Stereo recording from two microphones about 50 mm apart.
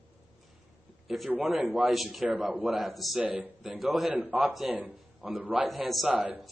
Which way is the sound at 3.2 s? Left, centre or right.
Right.